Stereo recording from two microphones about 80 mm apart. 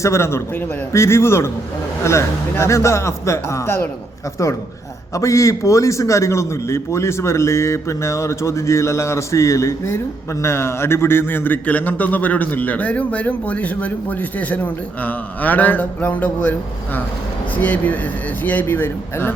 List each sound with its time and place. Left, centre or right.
0.0 s a man's voice: left
5.1 s a man's voice: left